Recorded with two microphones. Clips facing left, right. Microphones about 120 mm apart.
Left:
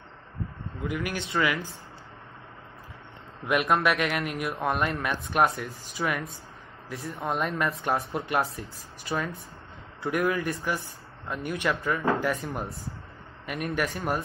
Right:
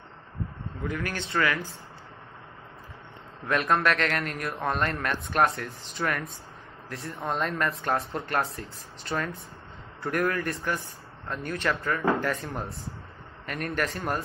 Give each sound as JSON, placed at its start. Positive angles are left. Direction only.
{"t": 0.9, "sound": "a man's voice", "side_deg": 10}
{"t": 3.4, "sound": "a man's voice", "side_deg": 10}
{"t": 12.4, "sound": "speech", "side_deg": 0}